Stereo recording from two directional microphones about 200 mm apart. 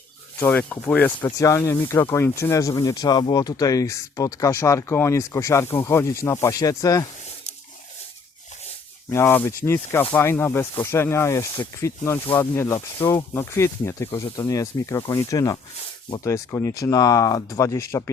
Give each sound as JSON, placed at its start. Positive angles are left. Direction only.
{"t": 0.3, "sound": "speech", "side_deg": 10}
{"t": 9.0, "sound": "speech", "side_deg": 10}